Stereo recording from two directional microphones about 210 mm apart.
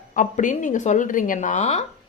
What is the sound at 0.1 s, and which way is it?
Speech, 35° left (ahead or behind).